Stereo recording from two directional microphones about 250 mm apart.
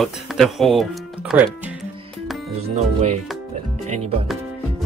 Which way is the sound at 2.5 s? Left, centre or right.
Right.